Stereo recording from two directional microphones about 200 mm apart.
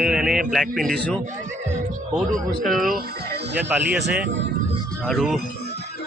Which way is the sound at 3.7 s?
5° right (ahead or behind).